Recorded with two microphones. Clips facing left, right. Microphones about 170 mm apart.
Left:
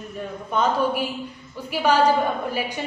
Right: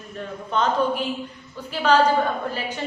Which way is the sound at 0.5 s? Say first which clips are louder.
Even; 10° left (ahead or behind).